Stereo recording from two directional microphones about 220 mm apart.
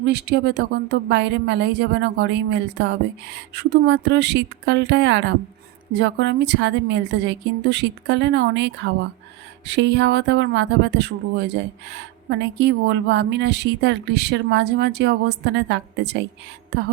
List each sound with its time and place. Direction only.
0.1 s speech: 50° right (ahead or behind)